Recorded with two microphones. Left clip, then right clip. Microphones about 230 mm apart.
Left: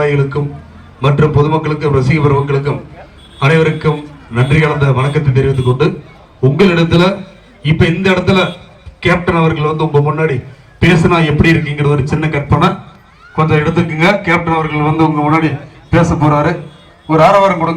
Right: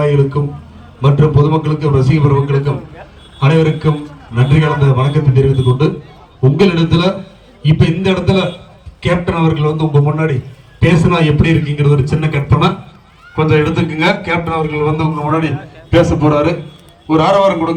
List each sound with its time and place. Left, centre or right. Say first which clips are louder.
0.0 s a man's voice: even; centre